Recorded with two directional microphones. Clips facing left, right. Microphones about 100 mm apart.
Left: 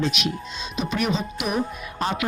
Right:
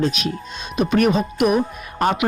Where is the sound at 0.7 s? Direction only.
50° right (ahead or behind).